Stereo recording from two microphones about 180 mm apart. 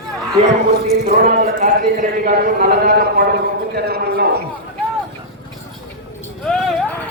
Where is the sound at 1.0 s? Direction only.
55° right (ahead or behind).